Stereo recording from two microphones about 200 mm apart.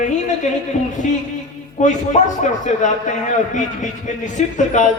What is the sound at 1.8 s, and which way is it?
A man's voice, 40° left (ahead or behind).